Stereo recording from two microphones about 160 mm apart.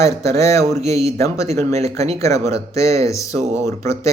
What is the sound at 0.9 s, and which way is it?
Speech, 40° right (ahead or behind).